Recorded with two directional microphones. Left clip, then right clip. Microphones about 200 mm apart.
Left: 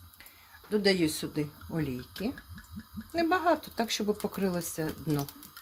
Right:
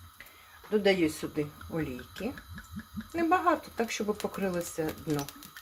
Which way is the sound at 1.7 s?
80° left.